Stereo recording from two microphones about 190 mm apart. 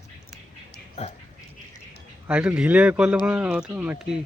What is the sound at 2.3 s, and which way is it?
Speech, 5° right (ahead or behind).